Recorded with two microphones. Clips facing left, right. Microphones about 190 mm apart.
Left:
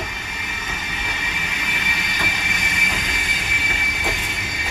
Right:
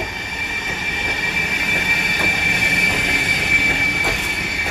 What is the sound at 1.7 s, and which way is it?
Train, 50° right (ahead or behind).